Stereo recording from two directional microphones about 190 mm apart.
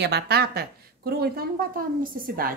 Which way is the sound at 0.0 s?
60° right (ahead or behind).